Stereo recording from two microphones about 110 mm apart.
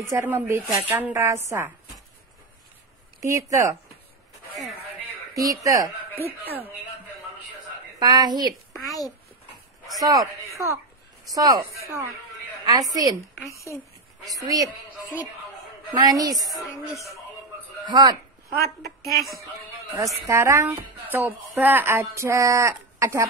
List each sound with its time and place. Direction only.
0.0 s speech: 25° right (ahead or behind)
3.2 s speech: 30° right (ahead or behind)
5.3 s speech: 30° right (ahead or behind)
6.1 s speech: 20° right (ahead or behind)
8.0 s speech: 40° right (ahead or behind)
8.7 s a child's voice: centre (ahead or behind)
9.9 s speech: 35° right (ahead or behind)
14.2 s speech: 35° right (ahead or behind)
15.9 s speech: 35° right (ahead or behind)
17.8 s speech: 40° right (ahead or behind)
20.2 s speech: 25° right (ahead or behind)